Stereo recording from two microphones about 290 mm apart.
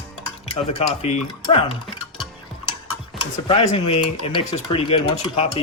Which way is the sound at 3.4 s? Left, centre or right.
Left.